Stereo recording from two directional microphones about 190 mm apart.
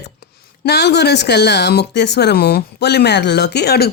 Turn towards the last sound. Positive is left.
turn(degrees=60)  # may be behind; listen again after turning